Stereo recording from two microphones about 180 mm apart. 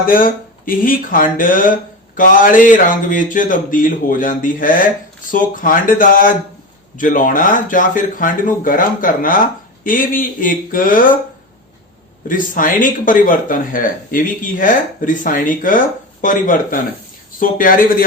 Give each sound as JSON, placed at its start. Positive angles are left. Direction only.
{"t": 0.1, "sound": "speech", "side_deg": 50}
{"t": 12.3, "sound": "speech", "side_deg": 50}